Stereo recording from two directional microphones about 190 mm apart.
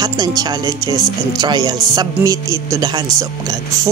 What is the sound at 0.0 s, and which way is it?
Speech, 20° right (ahead or behind).